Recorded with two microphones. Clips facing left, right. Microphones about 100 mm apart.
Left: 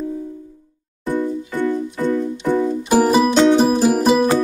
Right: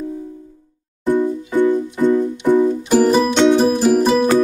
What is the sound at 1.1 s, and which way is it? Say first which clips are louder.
Music: right 4 dB; 15° right (ahead or behind).